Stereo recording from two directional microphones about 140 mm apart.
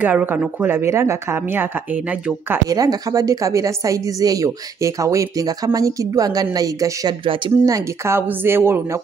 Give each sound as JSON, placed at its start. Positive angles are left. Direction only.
{"t": 0.0, "sound": "a woman's voice", "side_deg": -10}
{"t": 2.7, "sound": "a woman's voice", "side_deg": -25}